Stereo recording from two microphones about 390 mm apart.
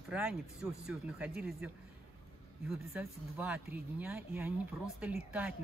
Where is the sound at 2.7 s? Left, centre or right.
Centre.